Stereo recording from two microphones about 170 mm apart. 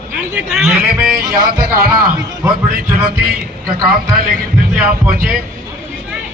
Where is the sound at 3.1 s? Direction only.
65° right (ahead or behind).